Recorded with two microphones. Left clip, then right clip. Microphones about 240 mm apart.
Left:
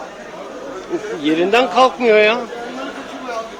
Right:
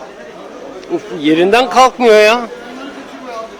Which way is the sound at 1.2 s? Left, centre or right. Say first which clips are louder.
Right 4 dB; right.